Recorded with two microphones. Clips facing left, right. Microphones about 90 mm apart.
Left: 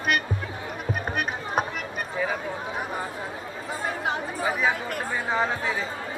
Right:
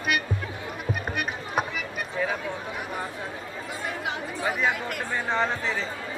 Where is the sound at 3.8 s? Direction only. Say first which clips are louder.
Left 4 dB; 35° left (ahead or behind).